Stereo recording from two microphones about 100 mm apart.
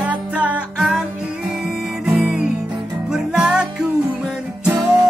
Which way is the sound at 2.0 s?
5° right (ahead or behind).